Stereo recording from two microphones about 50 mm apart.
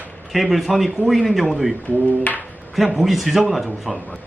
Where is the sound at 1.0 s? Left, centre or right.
Right.